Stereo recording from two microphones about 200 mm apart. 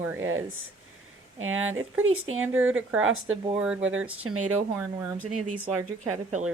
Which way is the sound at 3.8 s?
75° right (ahead or behind).